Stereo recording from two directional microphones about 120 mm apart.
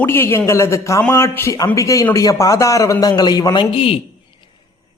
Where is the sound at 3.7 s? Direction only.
50° left (ahead or behind).